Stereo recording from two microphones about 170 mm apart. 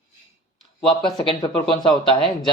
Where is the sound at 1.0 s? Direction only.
25° left (ahead or behind).